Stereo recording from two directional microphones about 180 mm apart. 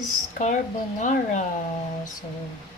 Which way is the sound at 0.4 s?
45° left (ahead or behind).